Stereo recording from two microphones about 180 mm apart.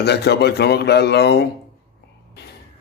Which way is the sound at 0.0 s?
65° left (ahead or behind).